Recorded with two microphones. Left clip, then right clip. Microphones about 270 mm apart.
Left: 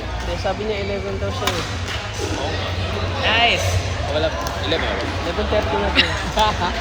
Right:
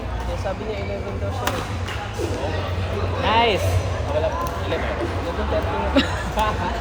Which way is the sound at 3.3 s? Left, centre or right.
Right.